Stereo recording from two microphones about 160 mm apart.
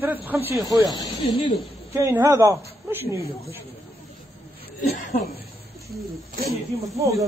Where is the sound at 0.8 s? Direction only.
30° left (ahead or behind).